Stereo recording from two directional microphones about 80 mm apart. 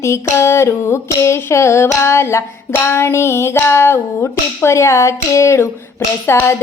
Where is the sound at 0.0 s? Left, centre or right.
Left.